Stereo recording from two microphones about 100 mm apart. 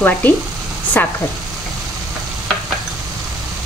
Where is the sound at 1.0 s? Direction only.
20° left (ahead or behind).